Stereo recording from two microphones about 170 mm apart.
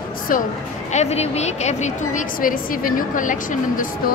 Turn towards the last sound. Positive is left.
turn(degrees=50)  # may be behind; listen again after turning